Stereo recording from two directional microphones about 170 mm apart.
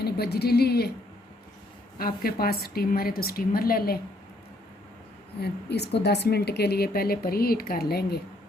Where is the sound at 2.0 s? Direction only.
60° left (ahead or behind).